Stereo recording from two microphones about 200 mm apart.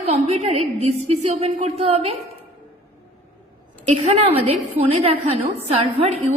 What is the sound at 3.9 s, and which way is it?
A woman's voice, 35° right (ahead or behind).